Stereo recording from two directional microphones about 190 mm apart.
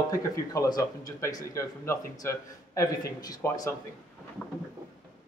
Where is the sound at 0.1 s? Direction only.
20° left (ahead or behind).